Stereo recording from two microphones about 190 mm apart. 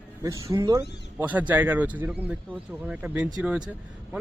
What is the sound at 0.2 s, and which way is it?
A man's voice, 15° right (ahead or behind).